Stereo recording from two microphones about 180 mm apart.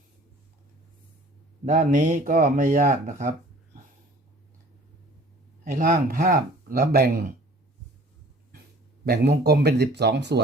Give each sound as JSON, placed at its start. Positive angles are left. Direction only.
{"t": 1.6, "sound": "speech", "side_deg": -45}
{"t": 5.7, "sound": "speech", "side_deg": -55}
{"t": 9.0, "sound": "speech", "side_deg": -65}